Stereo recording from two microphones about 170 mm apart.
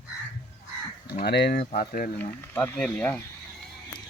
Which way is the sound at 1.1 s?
70° left (ahead or behind).